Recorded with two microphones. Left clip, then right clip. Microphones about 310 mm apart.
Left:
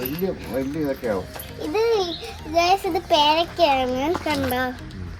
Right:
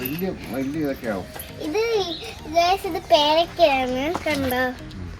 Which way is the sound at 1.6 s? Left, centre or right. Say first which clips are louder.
Left 2 dB; centre.